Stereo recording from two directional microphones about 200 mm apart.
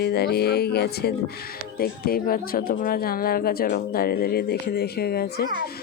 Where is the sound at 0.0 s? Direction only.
55° left (ahead or behind).